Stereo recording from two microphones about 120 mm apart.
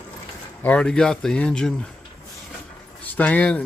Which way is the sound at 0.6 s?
10° left (ahead or behind).